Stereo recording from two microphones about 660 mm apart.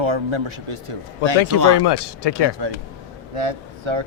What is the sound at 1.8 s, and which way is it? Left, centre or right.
Speech, left.